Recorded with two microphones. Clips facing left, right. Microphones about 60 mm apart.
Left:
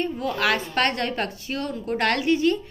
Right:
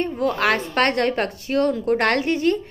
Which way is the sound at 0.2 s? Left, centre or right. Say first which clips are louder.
Right 5 dB; right.